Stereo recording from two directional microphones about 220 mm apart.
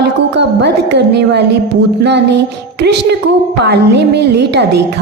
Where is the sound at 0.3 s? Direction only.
50° right (ahead or behind).